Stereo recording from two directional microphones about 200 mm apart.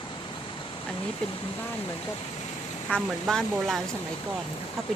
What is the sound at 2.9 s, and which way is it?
Speech, 5° left (ahead or behind).